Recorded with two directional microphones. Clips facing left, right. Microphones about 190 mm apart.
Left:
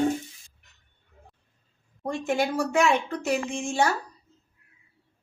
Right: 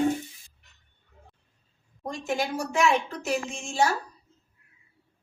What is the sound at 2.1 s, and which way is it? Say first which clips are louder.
A woman's voice: left 3 dB; 60° left (ahead or behind).